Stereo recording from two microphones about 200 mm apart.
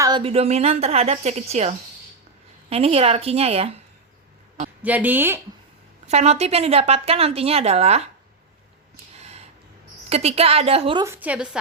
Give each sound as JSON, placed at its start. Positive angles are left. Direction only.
{"t": 0.0, "sound": "speech", "side_deg": -25}
{"t": 4.8, "sound": "a woman's voice", "side_deg": -10}
{"t": 6.1, "sound": "speech", "side_deg": -30}
{"t": 9.1, "sound": "a sound", "side_deg": -30}
{"t": 10.1, "sound": "a woman's voice", "side_deg": -30}
{"t": 11.0, "sound": "a woman's voice", "side_deg": -10}